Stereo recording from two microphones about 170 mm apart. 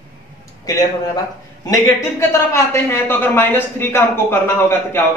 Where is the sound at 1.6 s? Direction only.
15° left (ahead or behind).